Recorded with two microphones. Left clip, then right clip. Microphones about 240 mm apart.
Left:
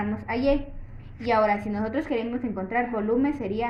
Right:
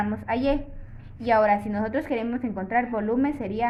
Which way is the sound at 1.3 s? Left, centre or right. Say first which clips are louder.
Right 2 dB; right.